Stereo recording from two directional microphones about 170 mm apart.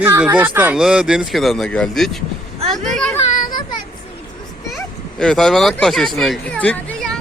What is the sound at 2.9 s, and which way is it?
Children playing, 5° left (ahead or behind).